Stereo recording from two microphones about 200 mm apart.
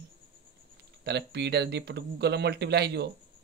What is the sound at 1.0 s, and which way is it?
A man's voice, 55° right (ahead or behind).